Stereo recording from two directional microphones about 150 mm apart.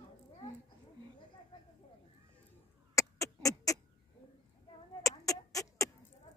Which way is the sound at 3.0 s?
20° left (ahead or behind).